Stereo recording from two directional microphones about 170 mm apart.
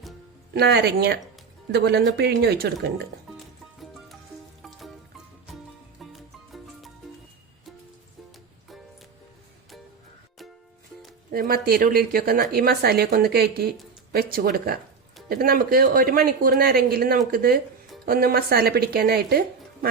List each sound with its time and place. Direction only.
0.5 s speech: 75° right (ahead or behind)
3.3 s music: centre (ahead or behind)
11.3 s speech: 60° right (ahead or behind)